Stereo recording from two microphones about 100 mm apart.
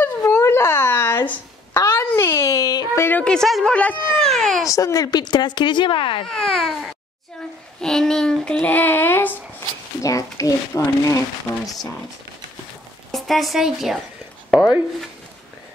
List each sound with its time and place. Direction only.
0.0 s a sound: 25° left (ahead or behind); by 2.9 s 40° left (ahead or behind)
3.0 s a sound: 15° left (ahead or behind)
3.3 s speech: 5° left (ahead or behind)
3.7 s a child's voice: 15° left (ahead or behind)
4.3 s baby cry: 5° left (ahead or behind)
4.6 s speech: 35° left (ahead or behind); by 6.2 s 55° left (ahead or behind)
6.2 s a child's voice: 5° left (ahead or behind)
10.0 s a child's voice: 35° left (ahead or behind)
10.7 s speech: 25° left (ahead or behind)
13.1 s a woman's voice: centre (ahead or behind)